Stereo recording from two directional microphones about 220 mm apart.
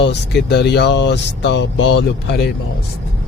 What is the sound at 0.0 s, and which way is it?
Speech, 50° left (ahead or behind).